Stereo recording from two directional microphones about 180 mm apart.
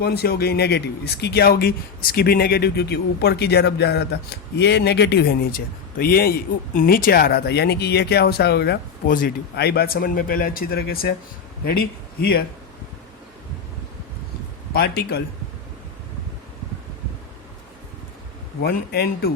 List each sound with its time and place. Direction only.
0.0 s speech: 60° left (ahead or behind)
14.7 s speech: 65° left (ahead or behind)
18.6 s speech: 60° left (ahead or behind)